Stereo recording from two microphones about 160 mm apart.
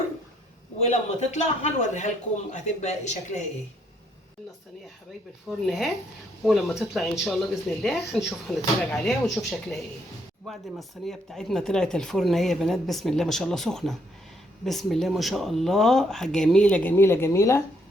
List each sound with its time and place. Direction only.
0.9 s speech: 45° left (ahead or behind)
5.5 s speech: centre (ahead or behind); by 17.6 s 15° left (ahead or behind)